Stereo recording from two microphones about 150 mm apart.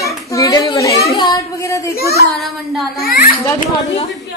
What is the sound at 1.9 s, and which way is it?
Speech, 90° left.